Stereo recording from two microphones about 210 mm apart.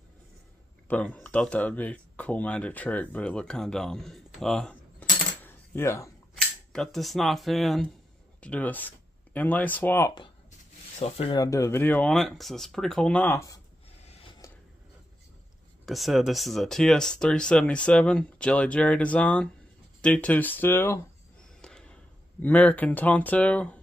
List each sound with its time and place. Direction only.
0.8 s speech: 5° left (ahead or behind)
5.4 s coin: 10° left (ahead or behind)
6.3 s speech: centre (ahead or behind)
11.0 s speech: 30° left (ahead or behind); by 13.6 s 15° left (ahead or behind)
14.0 s a sound: 30° left (ahead or behind)
15.8 s speech: centre (ahead or behind)
21.5 s basketball bounce: 5° left (ahead or behind)
22.4 s speech: 10° left (ahead or behind)